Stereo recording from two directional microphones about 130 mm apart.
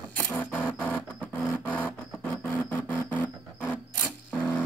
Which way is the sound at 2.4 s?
10° left (ahead or behind).